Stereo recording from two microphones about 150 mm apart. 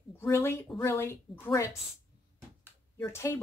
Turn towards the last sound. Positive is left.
turn(degrees=15)  # may be behind; listen again after turning